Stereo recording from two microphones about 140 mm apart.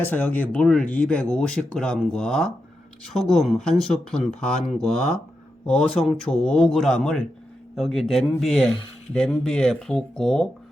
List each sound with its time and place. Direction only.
0.0 s speech: 10° left (ahead or behind)